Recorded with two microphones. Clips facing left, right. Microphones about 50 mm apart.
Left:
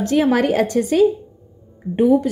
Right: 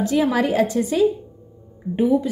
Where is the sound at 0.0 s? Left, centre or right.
Left.